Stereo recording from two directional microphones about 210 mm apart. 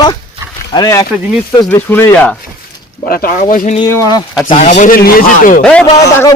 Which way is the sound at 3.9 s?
15° left (ahead or behind).